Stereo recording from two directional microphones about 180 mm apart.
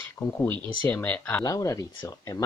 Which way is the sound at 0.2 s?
10° left (ahead or behind).